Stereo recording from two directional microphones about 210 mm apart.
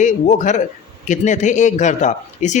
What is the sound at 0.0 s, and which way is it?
Speech, 35° left (ahead or behind).